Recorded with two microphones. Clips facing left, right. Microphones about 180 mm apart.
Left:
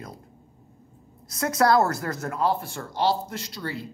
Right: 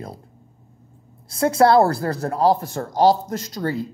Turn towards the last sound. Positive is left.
turn(degrees=-45)  # may be behind; listen again after turning